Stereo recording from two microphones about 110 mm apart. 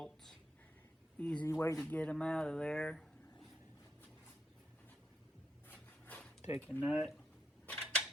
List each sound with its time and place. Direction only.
0.0 s a sound: 5° left (ahead or behind)
1.2 s speech: 10° left (ahead or behind)
1.5 s speech: 25° left (ahead or behind)
1.9 s speech: 10° left (ahead or behind)
5.6 s rub: 15° left (ahead or behind)
6.6 s speech: 15° left (ahead or behind)
6.8 s speech: centre (ahead or behind)
7.7 s a sound: 10° left (ahead or behind)